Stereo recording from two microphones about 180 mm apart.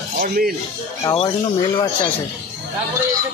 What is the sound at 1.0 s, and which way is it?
Speech, 25° left (ahead or behind).